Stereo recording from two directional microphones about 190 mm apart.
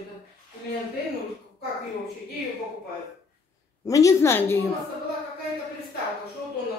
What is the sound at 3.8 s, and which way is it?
Speech, 15° left (ahead or behind).